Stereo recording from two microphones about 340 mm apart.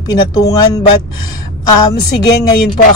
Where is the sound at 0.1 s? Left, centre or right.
Centre.